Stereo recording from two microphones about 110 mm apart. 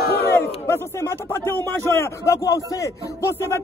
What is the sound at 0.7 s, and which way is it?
A man's voice, 25° left (ahead or behind).